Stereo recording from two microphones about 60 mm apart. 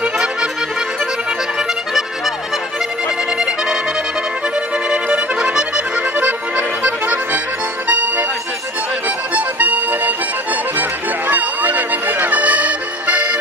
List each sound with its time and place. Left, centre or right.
1.5 s music: centre
3.3 s accordion: centre
4.9 s accordion: centre
7.9 s music: right